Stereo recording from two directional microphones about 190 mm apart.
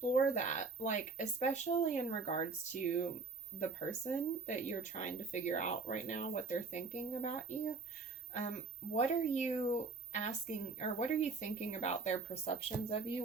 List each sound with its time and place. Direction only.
0.0 s speech: 40° left (ahead or behind)